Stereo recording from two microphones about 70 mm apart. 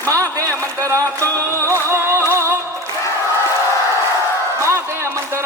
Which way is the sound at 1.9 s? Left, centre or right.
Right.